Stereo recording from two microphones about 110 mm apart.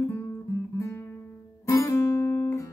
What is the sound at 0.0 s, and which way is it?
Guitar, 20° left (ahead or behind).